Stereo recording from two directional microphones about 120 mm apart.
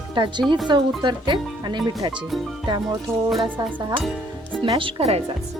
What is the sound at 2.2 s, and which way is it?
Music, centre (ahead or behind).